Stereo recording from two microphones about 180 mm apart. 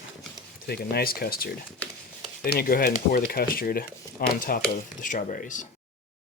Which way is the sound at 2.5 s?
55° left (ahead or behind).